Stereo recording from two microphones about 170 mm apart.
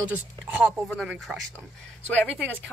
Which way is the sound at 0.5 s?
5° right (ahead or behind).